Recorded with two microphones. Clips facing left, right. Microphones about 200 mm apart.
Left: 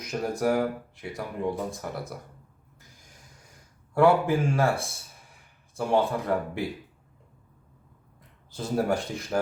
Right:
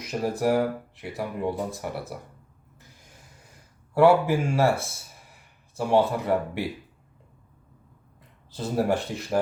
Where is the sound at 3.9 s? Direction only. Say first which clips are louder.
Right 2 dB; 5° right (ahead or behind).